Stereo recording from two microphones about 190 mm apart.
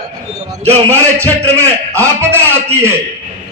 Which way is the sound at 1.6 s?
15° right (ahead or behind).